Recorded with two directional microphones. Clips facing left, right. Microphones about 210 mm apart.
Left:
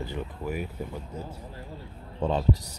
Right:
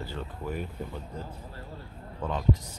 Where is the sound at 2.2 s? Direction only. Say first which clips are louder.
Left 6 dB; 30° left (ahead or behind).